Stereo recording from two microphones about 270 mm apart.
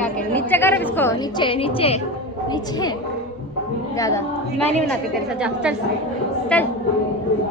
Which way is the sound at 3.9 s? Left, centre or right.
Centre.